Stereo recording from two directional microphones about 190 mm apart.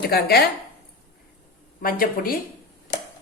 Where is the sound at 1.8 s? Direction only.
50° left (ahead or behind).